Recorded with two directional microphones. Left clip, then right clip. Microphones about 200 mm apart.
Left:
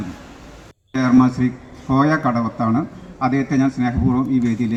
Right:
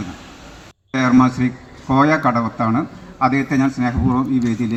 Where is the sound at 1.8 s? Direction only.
25° right (ahead or behind).